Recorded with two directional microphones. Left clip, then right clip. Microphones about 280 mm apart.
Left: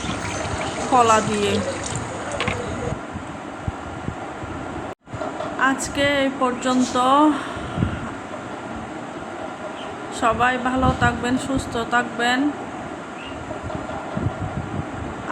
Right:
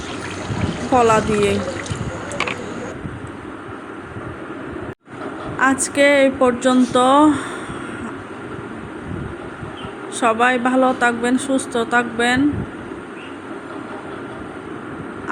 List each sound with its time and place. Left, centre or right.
0.9 s speech: centre
5.5 s speech: centre
10.2 s speech: centre